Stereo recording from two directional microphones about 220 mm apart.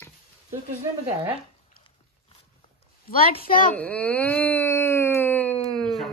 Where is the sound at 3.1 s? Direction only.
40° left (ahead or behind).